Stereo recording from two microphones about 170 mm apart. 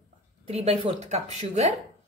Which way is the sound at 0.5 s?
40° right (ahead or behind).